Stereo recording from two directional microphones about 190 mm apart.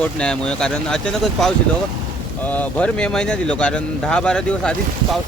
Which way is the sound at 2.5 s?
5° left (ahead or behind).